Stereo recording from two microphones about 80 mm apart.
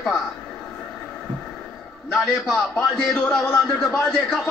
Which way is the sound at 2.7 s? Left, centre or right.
Centre.